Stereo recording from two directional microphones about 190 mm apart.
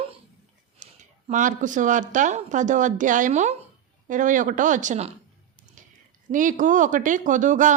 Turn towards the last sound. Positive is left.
turn(degrees=-40)  # may be behind; listen again after turning